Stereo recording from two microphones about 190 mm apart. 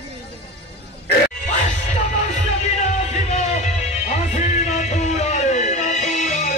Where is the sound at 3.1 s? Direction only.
35° left (ahead or behind).